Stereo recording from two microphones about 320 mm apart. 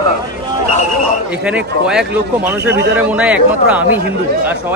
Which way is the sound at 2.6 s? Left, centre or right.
Right.